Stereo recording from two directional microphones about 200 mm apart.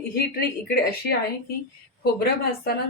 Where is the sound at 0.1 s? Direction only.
50° left (ahead or behind).